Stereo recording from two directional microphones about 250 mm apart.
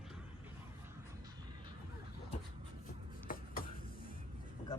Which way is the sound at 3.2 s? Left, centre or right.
Left.